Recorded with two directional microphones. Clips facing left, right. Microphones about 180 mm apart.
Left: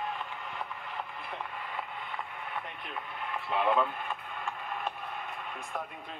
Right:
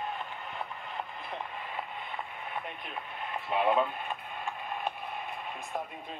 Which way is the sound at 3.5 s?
15° right (ahead or behind).